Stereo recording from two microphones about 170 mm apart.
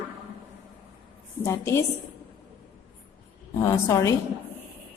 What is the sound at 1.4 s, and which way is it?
Speech, 15° left (ahead or behind).